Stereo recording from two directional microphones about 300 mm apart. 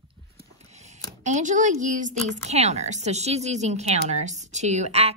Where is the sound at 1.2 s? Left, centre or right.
Right.